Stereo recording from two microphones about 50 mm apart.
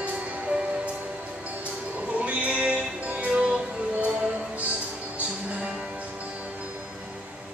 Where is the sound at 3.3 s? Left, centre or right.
Centre.